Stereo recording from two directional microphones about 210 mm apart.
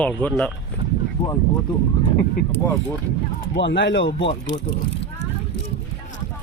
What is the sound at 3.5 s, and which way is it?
Speech, 60° left (ahead or behind).